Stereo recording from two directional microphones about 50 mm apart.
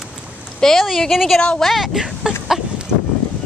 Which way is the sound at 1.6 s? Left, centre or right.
Centre.